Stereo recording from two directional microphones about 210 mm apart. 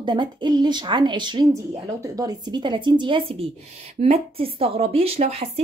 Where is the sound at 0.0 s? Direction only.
20° right (ahead or behind).